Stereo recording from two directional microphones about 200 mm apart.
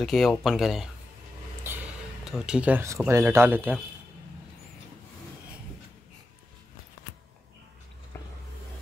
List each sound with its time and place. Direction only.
0.0 s speech: centre (ahead or behind)
2.2 s speech: 5° right (ahead or behind)